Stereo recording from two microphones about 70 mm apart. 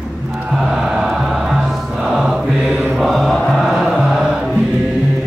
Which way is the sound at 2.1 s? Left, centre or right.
Centre.